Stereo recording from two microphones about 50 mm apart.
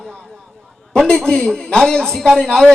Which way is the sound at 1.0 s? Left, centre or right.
Centre.